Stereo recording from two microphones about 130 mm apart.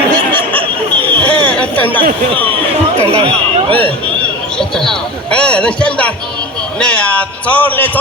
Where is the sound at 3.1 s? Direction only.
45° right (ahead or behind).